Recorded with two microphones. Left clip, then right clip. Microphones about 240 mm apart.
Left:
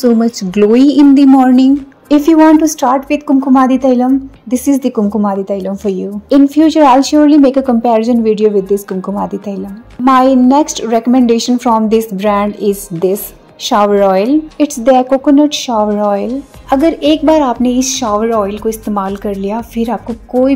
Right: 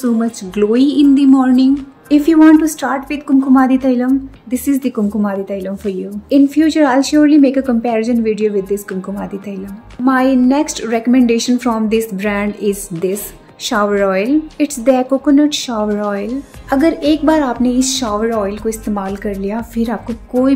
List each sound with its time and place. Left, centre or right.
0.6 s a woman's voice: left
12.9 s speech: centre
13.7 s a woman's voice: centre